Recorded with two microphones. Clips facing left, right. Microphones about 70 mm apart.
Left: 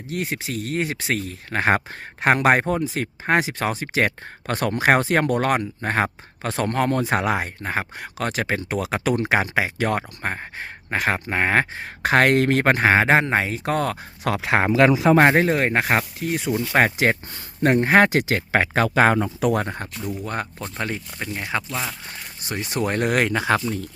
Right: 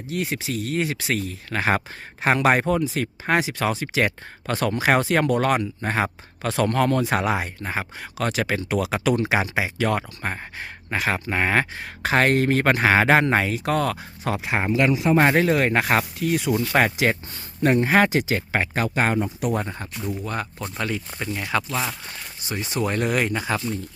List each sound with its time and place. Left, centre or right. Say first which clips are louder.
0.1 s speech: even; left
12.1 s speech: left 2 dB; left
12.6 s speech: right 1 dB; left
14.3 s speech: left 4 dB; left
15.2 s speech: left 2 dB; left
16.7 s speech: left 3 dB; left
19.6 s speech: left 1 dB; left
20.7 s speech: right 1 dB; left
21.7 s speech: right 2 dB; centre
22.7 s speech: left 2 dB; left